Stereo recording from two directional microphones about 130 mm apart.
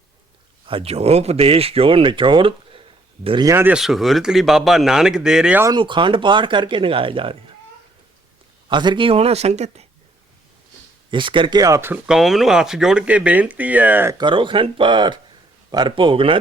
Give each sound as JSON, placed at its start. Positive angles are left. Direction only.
{"t": 0.6, "sound": "speech", "side_deg": -45}
{"t": 3.4, "sound": "speech", "side_deg": -20}
{"t": 3.8, "sound": "speech", "side_deg": 0}
{"t": 5.7, "sound": "speech", "side_deg": -40}
{"t": 8.7, "sound": "speech", "side_deg": -35}
{"t": 11.1, "sound": "speech", "side_deg": -40}
{"t": 12.0, "sound": "speech", "side_deg": -5}
{"t": 14.2, "sound": "speech", "side_deg": -40}